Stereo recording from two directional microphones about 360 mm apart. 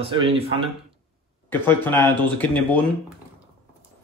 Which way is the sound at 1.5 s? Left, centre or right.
Centre.